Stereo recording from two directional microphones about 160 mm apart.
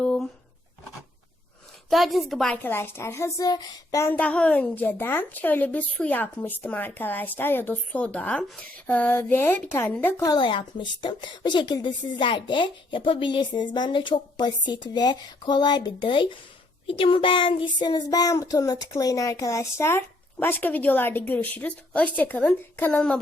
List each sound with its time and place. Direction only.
0.0 s a sound: 5° left (ahead or behind)
1.9 s a woman's voice: centre (ahead or behind); by 10.3 s 15° left (ahead or behind)
10.3 s a woman's voice: 30° left (ahead or behind); by 23.1 s 5° left (ahead or behind)